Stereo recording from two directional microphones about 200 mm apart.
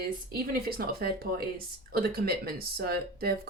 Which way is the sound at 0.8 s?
50° right (ahead or behind).